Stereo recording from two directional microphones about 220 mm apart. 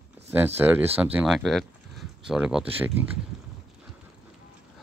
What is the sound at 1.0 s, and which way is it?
Speech, 5° right (ahead or behind).